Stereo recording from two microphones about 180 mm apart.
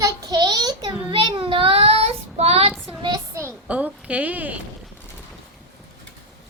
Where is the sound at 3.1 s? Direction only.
15° right (ahead or behind).